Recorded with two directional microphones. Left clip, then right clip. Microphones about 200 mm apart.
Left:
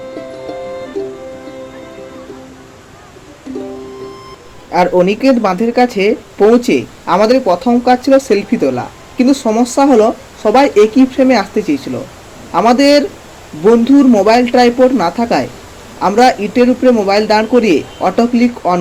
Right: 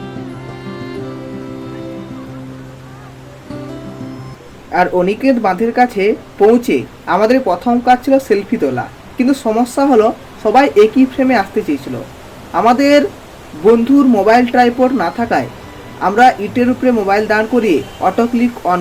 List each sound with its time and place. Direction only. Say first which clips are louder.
4.7 s speech: left 2 dB; 15° left (ahead or behind)
12.5 s speech: left 1 dB; 15° left (ahead or behind)